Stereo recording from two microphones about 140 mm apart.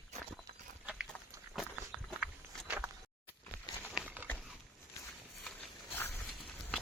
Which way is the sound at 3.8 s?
10° right (ahead or behind).